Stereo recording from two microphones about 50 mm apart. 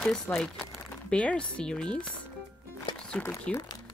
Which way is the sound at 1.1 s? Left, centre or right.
Left.